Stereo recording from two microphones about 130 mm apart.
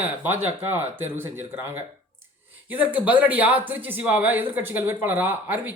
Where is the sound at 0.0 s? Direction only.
15° right (ahead or behind).